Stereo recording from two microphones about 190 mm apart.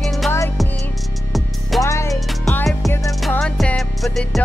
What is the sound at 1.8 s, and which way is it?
Music, 15° left (ahead or behind).